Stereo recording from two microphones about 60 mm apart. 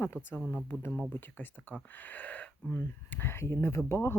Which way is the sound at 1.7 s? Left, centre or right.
Left.